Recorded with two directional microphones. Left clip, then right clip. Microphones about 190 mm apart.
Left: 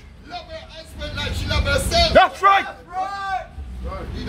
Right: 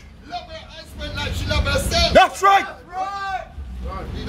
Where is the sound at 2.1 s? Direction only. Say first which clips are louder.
Right 1 dB; 20° right (ahead or behind).